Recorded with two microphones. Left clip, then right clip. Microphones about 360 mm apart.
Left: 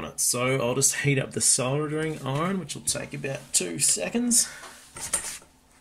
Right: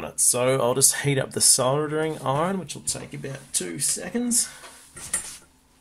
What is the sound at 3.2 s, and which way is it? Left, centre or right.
Speech, centre.